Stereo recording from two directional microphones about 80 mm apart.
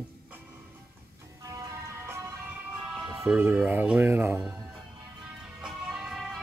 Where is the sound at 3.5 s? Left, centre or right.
Centre.